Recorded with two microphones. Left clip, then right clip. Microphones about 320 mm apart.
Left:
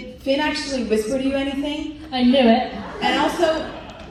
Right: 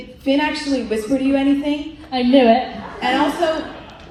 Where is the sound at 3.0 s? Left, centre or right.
Right.